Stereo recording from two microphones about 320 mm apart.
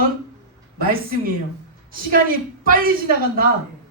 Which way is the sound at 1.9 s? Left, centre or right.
Right.